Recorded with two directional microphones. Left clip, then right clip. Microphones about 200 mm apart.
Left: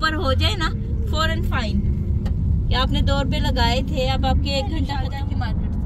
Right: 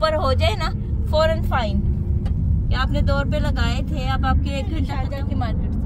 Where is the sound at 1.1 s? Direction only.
60° right (ahead or behind).